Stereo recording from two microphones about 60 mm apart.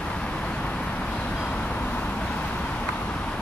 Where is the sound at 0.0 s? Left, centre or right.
Centre.